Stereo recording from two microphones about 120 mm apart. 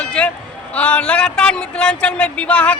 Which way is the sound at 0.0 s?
10° left (ahead or behind).